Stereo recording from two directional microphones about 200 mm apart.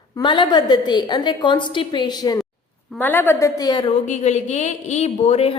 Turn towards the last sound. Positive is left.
turn(degrees=30)  # may be behind; listen again after turning